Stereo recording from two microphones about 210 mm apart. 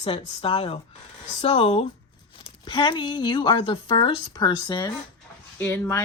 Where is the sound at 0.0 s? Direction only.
25° left (ahead or behind).